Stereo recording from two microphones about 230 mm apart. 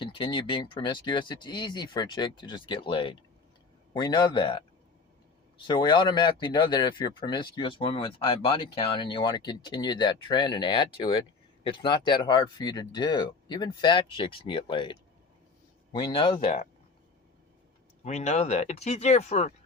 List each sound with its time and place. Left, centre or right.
0.0 s speech: left
5.6 s speech: centre
18.0 s speech: left